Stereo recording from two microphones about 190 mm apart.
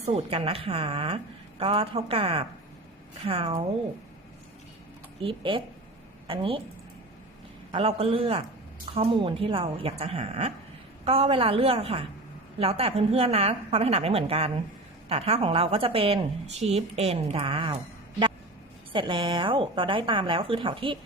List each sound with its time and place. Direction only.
0.0 s a woman's voice: 30° right (ahead or behind)
5.2 s a woman's voice: 25° right (ahead or behind)
7.7 s a woman's voice: 30° right (ahead or behind)
18.9 s a woman's voice: 25° right (ahead or behind)